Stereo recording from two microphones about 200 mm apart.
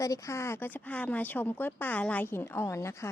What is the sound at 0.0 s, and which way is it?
Speech, 15° left (ahead or behind).